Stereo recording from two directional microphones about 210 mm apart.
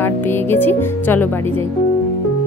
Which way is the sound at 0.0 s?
10° left (ahead or behind).